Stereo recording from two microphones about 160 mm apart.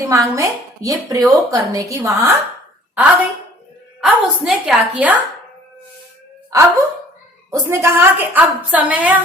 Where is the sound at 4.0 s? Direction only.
5° right (ahead or behind).